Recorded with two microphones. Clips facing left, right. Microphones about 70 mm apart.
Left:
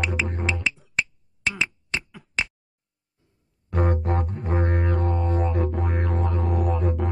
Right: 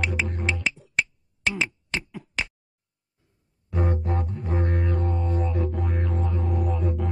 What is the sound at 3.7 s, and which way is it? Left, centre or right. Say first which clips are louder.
Music: left 3 dB; left.